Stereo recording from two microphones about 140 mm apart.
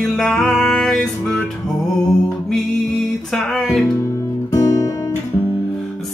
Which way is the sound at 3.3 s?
Centre (ahead or behind).